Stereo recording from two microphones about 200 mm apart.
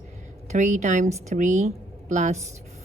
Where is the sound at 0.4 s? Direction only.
35° right (ahead or behind).